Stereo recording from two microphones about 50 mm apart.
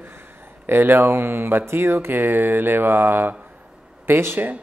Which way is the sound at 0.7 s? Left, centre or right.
Right.